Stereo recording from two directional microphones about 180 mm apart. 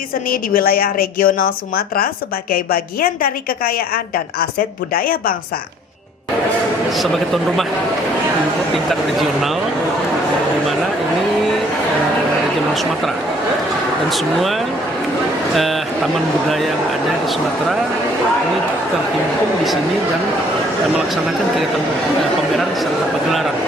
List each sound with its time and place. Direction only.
0.3 s a woman's voice: 55° left (ahead or behind)
8.9 s speech: centre (ahead or behind)